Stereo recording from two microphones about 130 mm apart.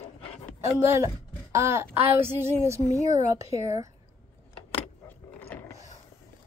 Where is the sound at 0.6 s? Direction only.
20° right (ahead or behind).